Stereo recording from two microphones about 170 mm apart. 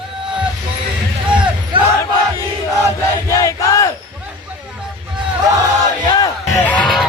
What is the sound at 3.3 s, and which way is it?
Battle cry, 20° left (ahead or behind).